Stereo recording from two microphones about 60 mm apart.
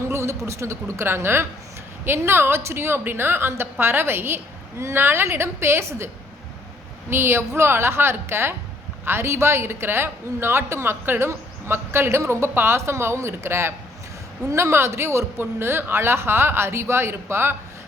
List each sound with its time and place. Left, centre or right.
0.1 s a woman's voice: right
4.8 s speech: right
7.1 s speech: right